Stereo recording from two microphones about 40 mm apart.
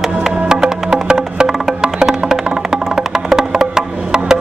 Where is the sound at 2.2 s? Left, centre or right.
Centre.